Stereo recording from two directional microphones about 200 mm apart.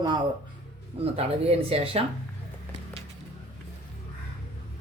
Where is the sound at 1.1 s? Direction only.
30° right (ahead or behind).